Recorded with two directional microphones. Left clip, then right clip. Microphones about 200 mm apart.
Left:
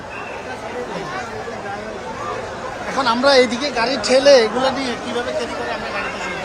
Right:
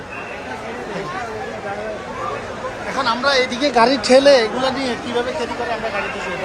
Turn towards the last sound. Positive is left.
turn(degrees=10)  # may be behind; listen again after turning